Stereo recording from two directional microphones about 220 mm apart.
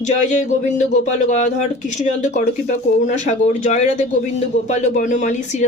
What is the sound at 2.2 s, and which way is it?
A woman's voice, 35° left (ahead or behind).